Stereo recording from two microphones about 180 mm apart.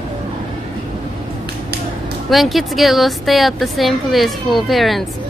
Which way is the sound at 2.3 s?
Centre (ahead or behind).